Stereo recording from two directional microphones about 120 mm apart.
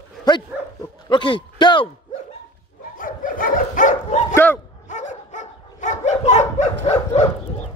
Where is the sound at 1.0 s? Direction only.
45° left (ahead or behind).